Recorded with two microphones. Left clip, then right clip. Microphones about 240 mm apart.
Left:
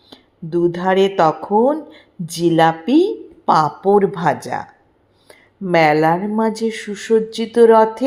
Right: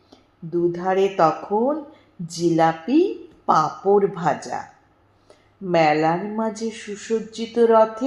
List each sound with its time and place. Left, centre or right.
0.1 s a woman's voice: left